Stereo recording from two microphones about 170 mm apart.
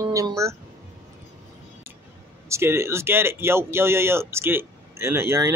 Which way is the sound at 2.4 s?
15° right (ahead or behind).